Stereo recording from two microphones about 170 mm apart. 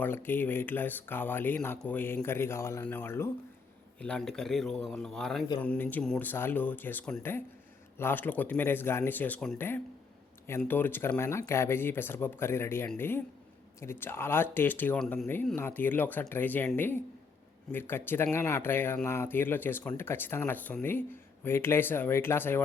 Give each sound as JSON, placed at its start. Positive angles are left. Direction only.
{"t": 0.0, "sound": "speech", "side_deg": 10}